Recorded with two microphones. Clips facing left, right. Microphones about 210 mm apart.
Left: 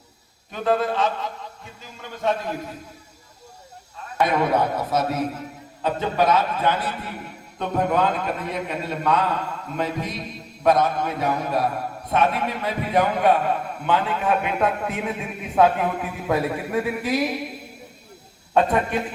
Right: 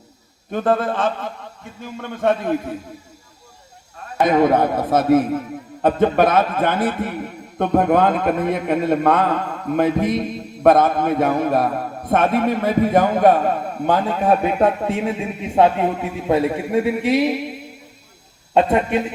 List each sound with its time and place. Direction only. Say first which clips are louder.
0.5 s a man's voice: right 3 dB; 50° right (ahead or behind)
4.2 s a man's voice: right 5 dB; 45° right (ahead or behind); by 17.3 s 25° right (ahead or behind)
18.5 s a man's voice: right 4 dB; 25° right (ahead or behind)